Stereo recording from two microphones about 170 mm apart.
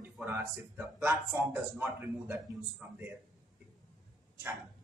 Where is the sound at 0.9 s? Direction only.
10° right (ahead or behind).